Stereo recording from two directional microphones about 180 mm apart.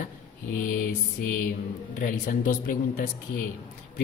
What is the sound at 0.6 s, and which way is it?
Speech, 50° left (ahead or behind).